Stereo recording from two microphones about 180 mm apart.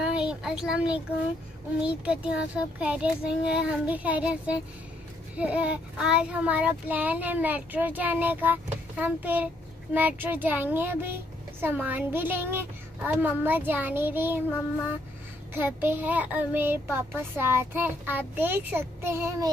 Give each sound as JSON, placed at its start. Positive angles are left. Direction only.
{"t": 0.0, "sound": "speech", "side_deg": -5}
{"t": 1.8, "sound": "child singing", "side_deg": -5}
{"t": 15.5, "sound": "child singing", "side_deg": -10}